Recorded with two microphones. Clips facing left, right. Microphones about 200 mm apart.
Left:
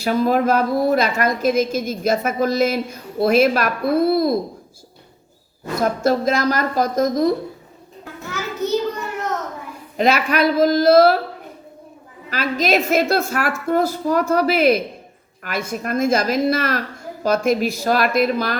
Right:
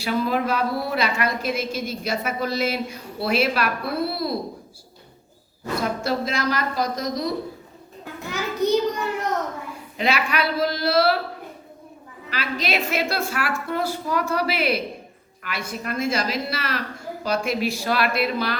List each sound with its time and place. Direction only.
0.0 s a woman's voice: 45° left (ahead or behind)
5.8 s a woman's voice: 45° left (ahead or behind)
8.2 s a sound: 15° right (ahead or behind)
10.0 s a woman's voice: 45° left (ahead or behind)
12.3 s a woman's voice: 45° left (ahead or behind)